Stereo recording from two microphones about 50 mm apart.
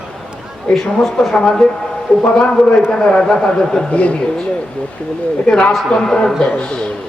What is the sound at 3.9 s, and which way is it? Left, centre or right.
Speech, left.